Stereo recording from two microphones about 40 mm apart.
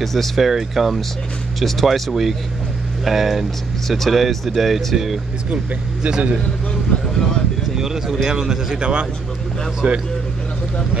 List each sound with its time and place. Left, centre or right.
0.0 s speech: centre
0.5 s speech: centre
6.0 s a man's voice: right
7.7 s speech: centre; by 10.0 s right